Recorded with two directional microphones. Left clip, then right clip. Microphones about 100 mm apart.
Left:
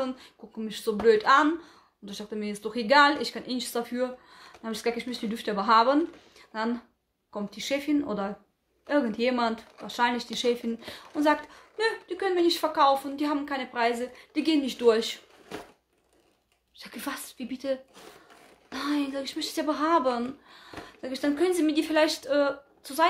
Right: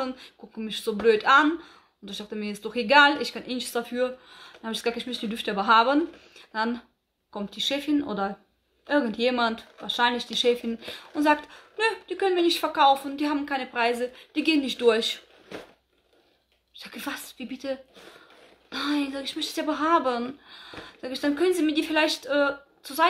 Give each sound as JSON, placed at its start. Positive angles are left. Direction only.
{"t": 0.0, "sound": "speech", "side_deg": -15}
{"t": 16.7, "sound": "speech", "side_deg": -5}